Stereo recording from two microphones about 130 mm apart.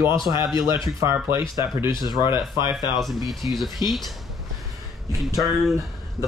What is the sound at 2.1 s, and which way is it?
Speech, 35° left (ahead or behind).